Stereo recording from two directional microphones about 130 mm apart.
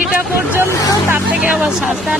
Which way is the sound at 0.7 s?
25° left (ahead or behind).